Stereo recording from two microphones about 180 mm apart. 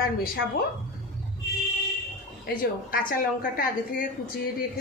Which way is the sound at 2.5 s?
50° left (ahead or behind).